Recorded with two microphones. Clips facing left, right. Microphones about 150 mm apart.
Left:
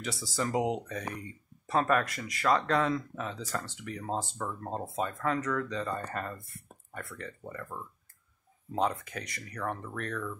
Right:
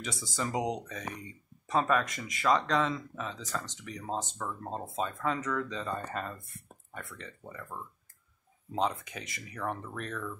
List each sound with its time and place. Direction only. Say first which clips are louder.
0.0 s speech: left 2 dB; centre (ahead or behind)
2.1 s speech: left 1 dB; 20° right (ahead or behind)
2.4 s speech: left 1 dB; 5° left (ahead or behind)
8.9 s speech: left 3 dB; centre (ahead or behind)